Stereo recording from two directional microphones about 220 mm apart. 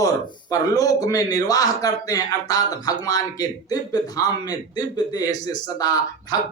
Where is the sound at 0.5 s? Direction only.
15° left (ahead or behind).